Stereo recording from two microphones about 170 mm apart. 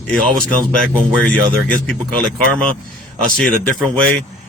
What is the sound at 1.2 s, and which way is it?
Speech, 5° left (ahead or behind).